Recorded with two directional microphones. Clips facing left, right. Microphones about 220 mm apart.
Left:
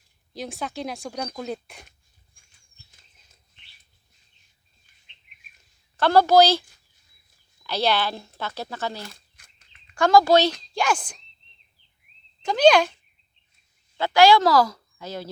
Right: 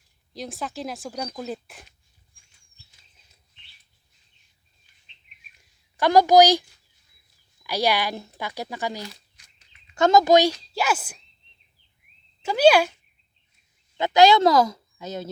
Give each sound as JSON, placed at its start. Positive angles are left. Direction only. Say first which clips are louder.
{"t": 0.3, "sound": "speech", "louder": "left 1 dB", "side_deg": 0}
{"t": 5.5, "sound": "a sound", "louder": "left 1 dB", "side_deg": -15}
{"t": 7.6, "sound": "speech", "louder": "even", "side_deg": -10}
{"t": 9.0, "sound": "a sound", "louder": "right 2 dB", "side_deg": 50}
{"t": 9.9, "sound": "speech", "louder": "even", "side_deg": -20}
{"t": 10.6, "sound": "speech", "louder": "left 1 dB", "side_deg": -5}
{"t": 12.4, "sound": "speech", "louder": "even", "side_deg": -5}
{"t": 13.9, "sound": "speech", "louder": "even", "side_deg": -20}